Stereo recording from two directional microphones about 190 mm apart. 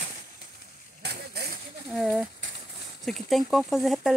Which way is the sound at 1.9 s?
Centre (ahead or behind).